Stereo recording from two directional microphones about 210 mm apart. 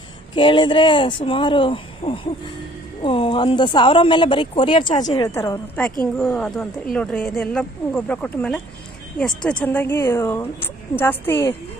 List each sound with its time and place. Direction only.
0.3 s speech: 25° left (ahead or behind)